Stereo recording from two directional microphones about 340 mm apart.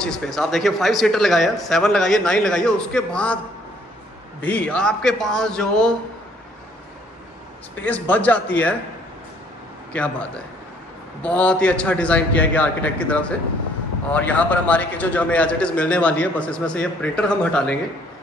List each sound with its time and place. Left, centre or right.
0.0 s a man's voice: centre
4.4 s a man's voice: centre
7.8 s a man's voice: centre
9.9 s a man's voice: centre